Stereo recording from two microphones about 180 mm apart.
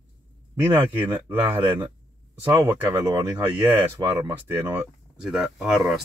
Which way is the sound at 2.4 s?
10° right (ahead or behind).